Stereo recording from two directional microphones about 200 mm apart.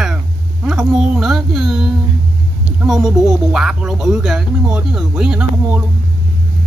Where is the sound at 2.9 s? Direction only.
Centre (ahead or behind).